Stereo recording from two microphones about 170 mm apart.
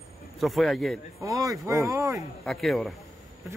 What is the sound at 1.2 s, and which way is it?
Speech, 20° right (ahead or behind).